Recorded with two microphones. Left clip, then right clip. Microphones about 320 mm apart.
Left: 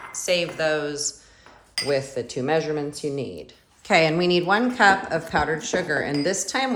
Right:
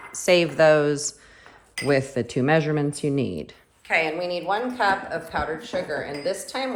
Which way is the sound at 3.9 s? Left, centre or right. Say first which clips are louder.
Left 4 dB; centre.